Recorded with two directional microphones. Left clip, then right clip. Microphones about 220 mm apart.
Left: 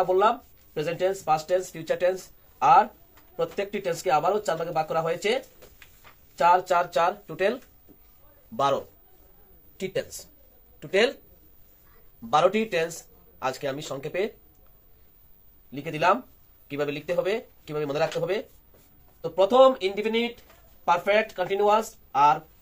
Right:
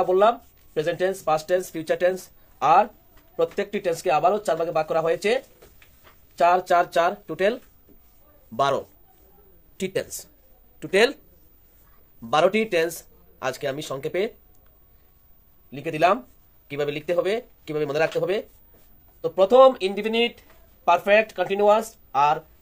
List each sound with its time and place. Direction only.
0.0 s speech: 50° right (ahead or behind)
12.3 s speech: 50° right (ahead or behind)
15.7 s speech: 45° right (ahead or behind)